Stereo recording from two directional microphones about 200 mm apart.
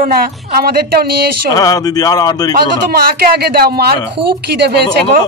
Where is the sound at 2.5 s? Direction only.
50° right (ahead or behind).